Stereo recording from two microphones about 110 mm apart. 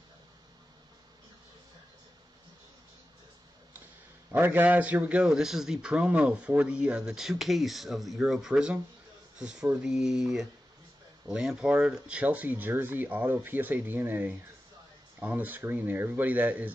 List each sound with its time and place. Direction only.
4.3 s a man's voice: 20° right (ahead or behind)